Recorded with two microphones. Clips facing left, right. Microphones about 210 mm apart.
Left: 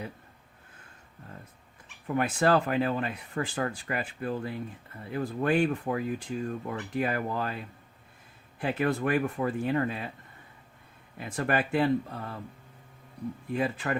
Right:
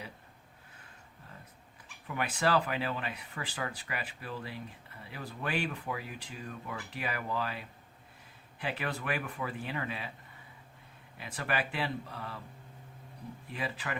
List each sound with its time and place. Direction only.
2.0 s speech: 45° left (ahead or behind)
11.2 s speech: 45° left (ahead or behind)
13.5 s speech: 45° left (ahead or behind)